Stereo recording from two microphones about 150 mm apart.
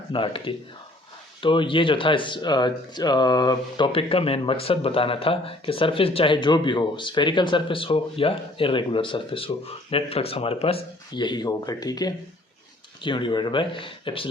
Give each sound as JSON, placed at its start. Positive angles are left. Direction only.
{"t": 0.1, "sound": "speech", "side_deg": 35}